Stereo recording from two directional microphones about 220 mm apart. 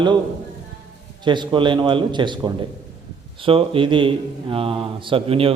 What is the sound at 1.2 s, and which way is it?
Speech, 20° right (ahead or behind).